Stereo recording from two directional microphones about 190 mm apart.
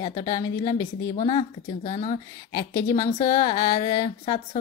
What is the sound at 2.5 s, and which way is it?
Speech, 20° left (ahead or behind).